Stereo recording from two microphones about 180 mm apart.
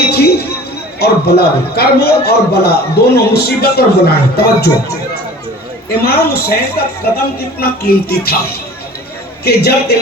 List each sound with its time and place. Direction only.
0.1 s a sound: 60° left (ahead or behind)
0.9 s a man's voice: 65° left (ahead or behind)
5.9 s a man's voice: 60° left (ahead or behind)